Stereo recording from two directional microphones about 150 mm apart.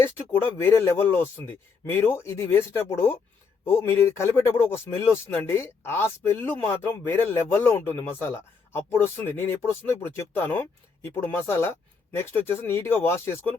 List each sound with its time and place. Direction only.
0.0 s speech: 15° left (ahead or behind)